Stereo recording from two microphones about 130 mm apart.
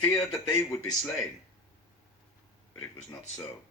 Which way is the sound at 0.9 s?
5° left (ahead or behind).